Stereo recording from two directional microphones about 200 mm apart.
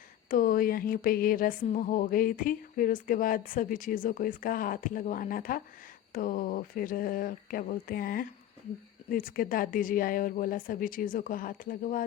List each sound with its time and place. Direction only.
0.3 s speech: 45° left (ahead or behind)